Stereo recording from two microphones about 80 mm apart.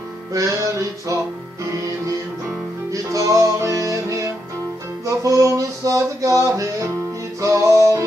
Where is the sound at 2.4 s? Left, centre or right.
Right.